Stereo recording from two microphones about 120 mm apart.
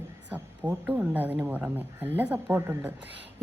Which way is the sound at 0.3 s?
15° right (ahead or behind).